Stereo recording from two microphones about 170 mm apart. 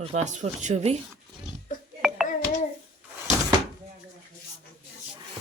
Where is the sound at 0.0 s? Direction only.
45° right (ahead or behind).